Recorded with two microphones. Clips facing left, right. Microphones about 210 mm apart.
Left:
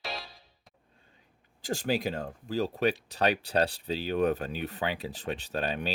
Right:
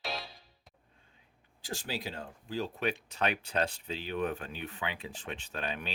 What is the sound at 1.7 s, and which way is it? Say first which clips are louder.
Speech: left 9 dB; 50° left (ahead or behind).